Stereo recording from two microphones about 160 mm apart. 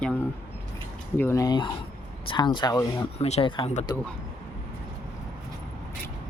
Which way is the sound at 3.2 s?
40° left (ahead or behind).